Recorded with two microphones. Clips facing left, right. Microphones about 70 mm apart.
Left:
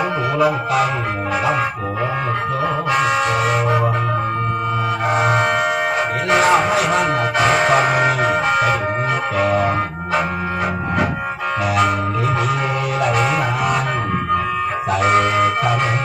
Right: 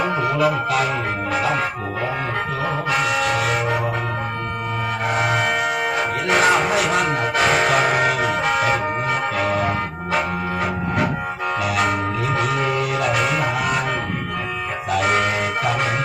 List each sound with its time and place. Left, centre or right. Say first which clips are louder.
2.9 s music: left 2 dB; left
5.0 s music: left 3 dB; left
9.5 s music: left 4 dB; left
15.0 s music: left 6 dB; left